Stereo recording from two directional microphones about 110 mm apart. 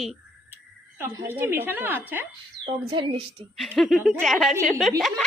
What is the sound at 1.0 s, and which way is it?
A woman's voice, 20° right (ahead or behind).